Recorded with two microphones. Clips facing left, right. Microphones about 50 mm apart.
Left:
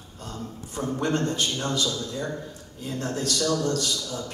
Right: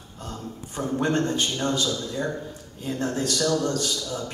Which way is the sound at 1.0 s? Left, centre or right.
Right.